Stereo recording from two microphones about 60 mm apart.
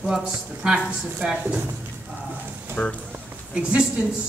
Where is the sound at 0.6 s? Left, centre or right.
Centre.